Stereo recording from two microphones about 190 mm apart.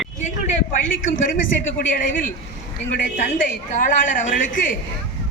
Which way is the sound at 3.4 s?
45° left (ahead or behind).